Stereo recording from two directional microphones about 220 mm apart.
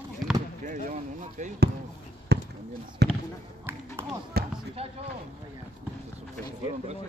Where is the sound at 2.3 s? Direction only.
50° right (ahead or behind).